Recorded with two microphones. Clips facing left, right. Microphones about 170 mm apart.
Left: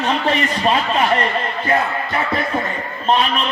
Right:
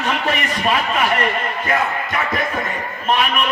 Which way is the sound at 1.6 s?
30° left (ahead or behind).